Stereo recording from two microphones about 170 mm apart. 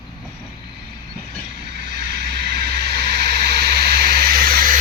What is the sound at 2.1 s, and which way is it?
Vehicle, 75° right (ahead or behind).